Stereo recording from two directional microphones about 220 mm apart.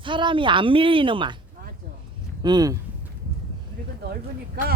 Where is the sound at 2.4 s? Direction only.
20° right (ahead or behind).